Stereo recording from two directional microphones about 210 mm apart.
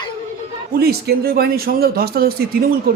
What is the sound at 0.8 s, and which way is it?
Speech, 45° right (ahead or behind).